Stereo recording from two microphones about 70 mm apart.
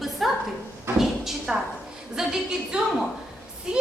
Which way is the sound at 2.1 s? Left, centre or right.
Centre.